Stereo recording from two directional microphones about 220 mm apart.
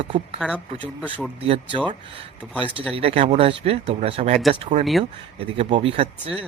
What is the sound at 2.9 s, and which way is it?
A man's voice, 25° right (ahead or behind).